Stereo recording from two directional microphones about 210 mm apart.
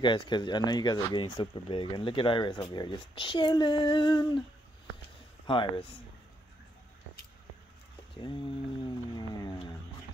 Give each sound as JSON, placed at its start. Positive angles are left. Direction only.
{"t": 0.0, "sound": "speech", "side_deg": 25}
{"t": 5.5, "sound": "speech", "side_deg": 25}
{"t": 8.2, "sound": "speech", "side_deg": 25}